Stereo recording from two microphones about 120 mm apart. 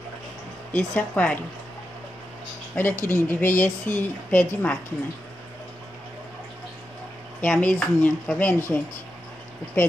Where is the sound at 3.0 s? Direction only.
20° left (ahead or behind).